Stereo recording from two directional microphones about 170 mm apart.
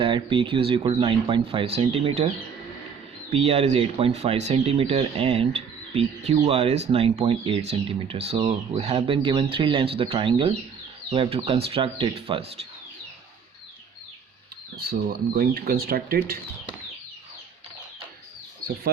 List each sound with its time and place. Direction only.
0.0 s speech: 30° right (ahead or behind)
14.8 s speech: 65° right (ahead or behind)